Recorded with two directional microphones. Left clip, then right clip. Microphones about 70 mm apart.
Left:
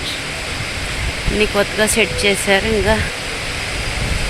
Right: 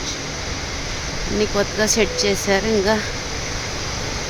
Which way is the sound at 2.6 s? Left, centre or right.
Right.